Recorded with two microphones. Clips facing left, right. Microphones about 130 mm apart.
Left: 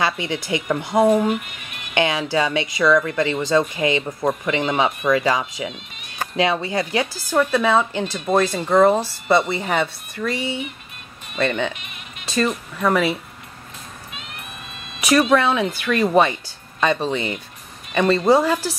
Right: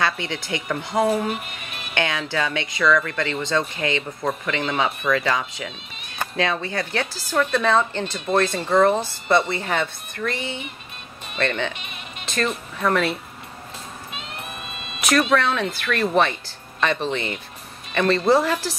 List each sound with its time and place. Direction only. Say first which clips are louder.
0.0 s speech: left 2 dB; 15° left (ahead or behind)
15.1 s speech: left 3 dB; 10° left (ahead or behind)